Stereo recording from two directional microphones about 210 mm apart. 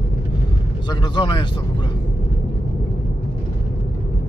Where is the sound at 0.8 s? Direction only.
20° left (ahead or behind).